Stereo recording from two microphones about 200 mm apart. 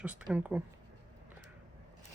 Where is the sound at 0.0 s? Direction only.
5° right (ahead or behind).